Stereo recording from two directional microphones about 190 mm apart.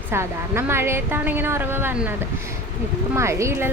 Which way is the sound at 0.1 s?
15° right (ahead or behind).